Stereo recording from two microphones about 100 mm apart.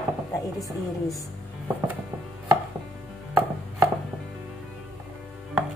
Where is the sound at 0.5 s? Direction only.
Centre (ahead or behind).